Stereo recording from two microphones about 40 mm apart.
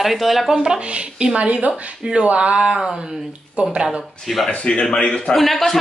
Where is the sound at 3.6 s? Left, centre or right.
Right.